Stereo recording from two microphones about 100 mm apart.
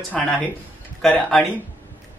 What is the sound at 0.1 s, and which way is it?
Speech, 5° left (ahead or behind).